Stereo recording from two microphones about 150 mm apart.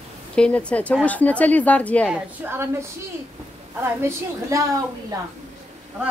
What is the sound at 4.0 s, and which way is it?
Speech, 20° right (ahead or behind).